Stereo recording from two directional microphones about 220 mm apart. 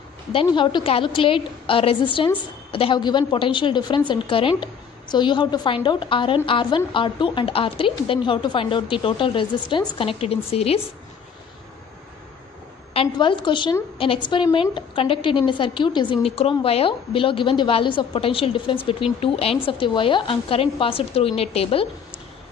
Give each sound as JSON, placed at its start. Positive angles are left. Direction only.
{"t": 0.3, "sound": "a woman's voice", "side_deg": 25}
{"t": 12.9, "sound": "a woman's voice", "side_deg": 25}